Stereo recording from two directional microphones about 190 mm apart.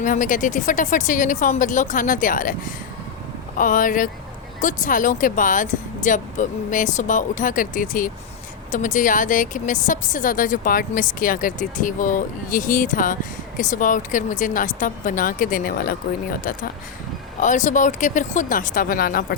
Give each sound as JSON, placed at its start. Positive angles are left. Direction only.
{"t": 0.0, "sound": "a woman's voice", "side_deg": 45}